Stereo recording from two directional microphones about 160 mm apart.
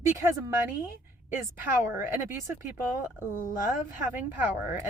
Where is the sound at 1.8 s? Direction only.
15° right (ahead or behind).